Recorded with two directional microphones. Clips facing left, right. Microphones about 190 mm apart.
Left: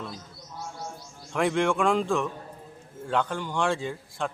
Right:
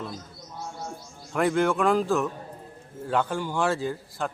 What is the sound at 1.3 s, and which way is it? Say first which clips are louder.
A man's voice: right 1 dB; centre (ahead or behind).